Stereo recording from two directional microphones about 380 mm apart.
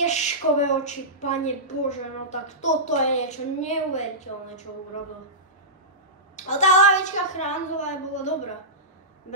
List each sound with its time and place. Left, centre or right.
0.0 s a woman's voice: centre
6.3 s a woman's voice: centre